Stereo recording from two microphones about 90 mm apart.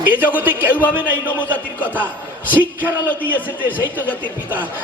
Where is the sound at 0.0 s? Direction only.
20° right (ahead or behind).